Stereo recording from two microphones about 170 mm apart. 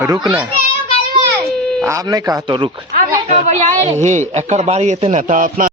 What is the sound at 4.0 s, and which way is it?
A man's voice, 45° right (ahead or behind).